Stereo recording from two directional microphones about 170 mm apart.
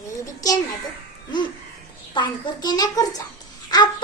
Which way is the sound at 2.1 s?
25° left (ahead or behind).